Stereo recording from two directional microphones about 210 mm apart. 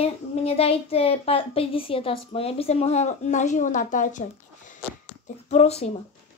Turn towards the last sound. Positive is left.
turn(degrees=30)  # may be behind; listen again after turning